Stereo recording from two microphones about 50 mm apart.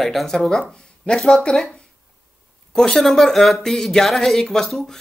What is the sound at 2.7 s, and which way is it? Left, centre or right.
Speech, centre.